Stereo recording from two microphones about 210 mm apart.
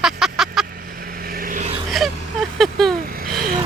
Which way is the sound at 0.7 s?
45° right (ahead or behind).